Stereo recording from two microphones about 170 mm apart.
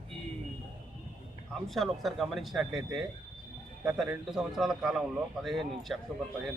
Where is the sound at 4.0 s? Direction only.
Centre (ahead or behind).